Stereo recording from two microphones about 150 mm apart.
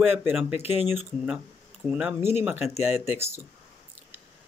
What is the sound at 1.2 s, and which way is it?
Speech, 5° right (ahead or behind).